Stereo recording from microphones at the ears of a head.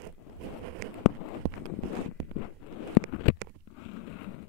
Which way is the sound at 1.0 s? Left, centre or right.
Left.